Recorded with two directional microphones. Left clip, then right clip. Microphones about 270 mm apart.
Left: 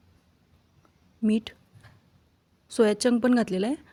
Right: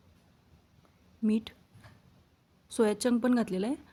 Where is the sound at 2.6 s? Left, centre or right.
Centre.